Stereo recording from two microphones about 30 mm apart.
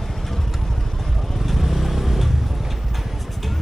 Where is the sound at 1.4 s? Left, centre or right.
Centre.